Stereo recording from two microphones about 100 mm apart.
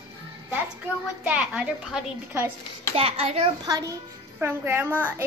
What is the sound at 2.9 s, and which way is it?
Speech, 75° right (ahead or behind).